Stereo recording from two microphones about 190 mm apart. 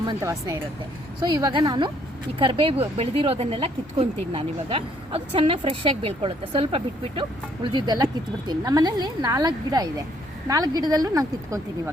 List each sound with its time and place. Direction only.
0.0 s a woman's voice: 20° right (ahead or behind)